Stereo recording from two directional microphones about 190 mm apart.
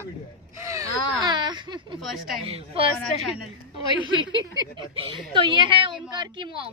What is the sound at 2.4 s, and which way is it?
Speech, 30° right (ahead or behind).